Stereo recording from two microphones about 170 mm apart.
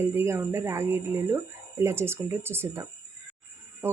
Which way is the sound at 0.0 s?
15° right (ahead or behind).